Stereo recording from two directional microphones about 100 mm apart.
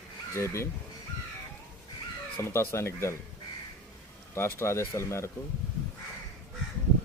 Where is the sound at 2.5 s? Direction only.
25° left (ahead or behind).